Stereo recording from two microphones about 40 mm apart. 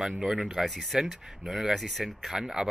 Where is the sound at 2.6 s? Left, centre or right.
Right.